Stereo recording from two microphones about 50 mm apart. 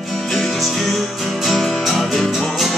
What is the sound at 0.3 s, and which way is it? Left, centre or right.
Music, centre.